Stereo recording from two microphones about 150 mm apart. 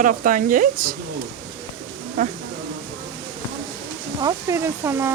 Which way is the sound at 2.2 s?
60° right (ahead or behind).